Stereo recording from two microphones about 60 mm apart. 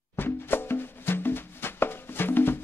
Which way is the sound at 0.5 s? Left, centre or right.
Left.